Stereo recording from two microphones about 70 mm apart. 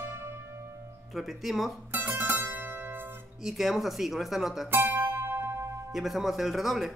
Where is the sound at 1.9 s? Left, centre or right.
Right.